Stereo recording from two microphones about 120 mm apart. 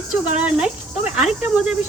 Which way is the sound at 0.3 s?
10° right (ahead or behind).